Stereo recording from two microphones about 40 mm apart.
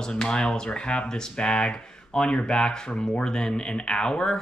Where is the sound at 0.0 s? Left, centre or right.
Centre.